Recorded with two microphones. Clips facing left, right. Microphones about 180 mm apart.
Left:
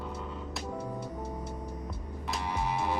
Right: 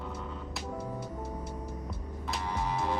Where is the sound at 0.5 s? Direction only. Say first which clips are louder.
Left 1 dB; 5° right (ahead or behind).